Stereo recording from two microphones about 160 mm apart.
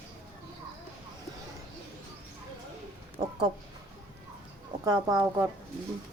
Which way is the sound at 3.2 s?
30° right (ahead or behind).